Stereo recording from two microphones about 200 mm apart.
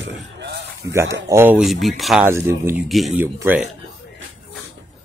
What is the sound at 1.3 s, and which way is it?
Speech, 10° right (ahead or behind).